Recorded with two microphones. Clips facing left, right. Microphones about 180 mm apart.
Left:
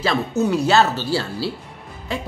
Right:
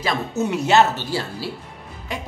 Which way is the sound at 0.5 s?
20° right (ahead or behind).